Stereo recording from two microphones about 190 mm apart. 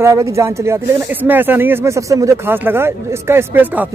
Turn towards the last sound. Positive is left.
turn(degrees=-10)  # may be behind; listen again after turning